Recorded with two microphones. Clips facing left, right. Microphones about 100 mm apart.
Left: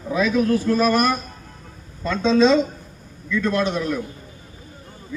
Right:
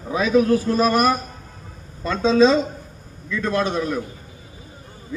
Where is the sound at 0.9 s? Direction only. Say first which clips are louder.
Right 1 dB; 10° right (ahead or behind).